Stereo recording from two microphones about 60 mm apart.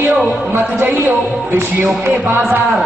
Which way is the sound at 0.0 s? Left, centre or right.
Right.